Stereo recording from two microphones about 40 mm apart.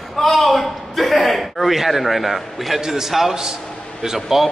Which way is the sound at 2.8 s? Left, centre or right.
Centre.